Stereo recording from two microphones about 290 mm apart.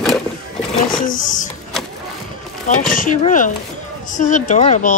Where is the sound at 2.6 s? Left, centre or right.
Left.